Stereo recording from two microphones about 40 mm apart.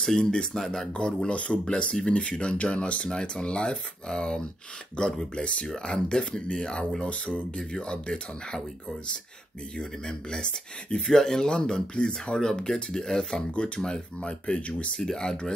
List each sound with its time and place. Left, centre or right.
0.0 s speech: centre
0.9 s speech: left
7.5 s speech: left
10.0 s speech: left
14.2 s speech: left
15.0 s speech: centre